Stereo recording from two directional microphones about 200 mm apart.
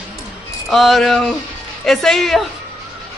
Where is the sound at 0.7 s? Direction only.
Centre (ahead or behind).